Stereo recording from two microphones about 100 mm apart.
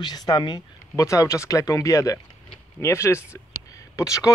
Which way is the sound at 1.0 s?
30° left (ahead or behind).